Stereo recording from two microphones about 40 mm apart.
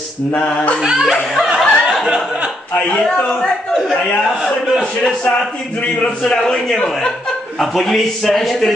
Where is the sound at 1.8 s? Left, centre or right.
Right.